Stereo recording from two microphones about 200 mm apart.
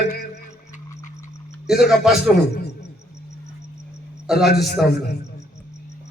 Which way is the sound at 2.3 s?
55° left (ahead or behind).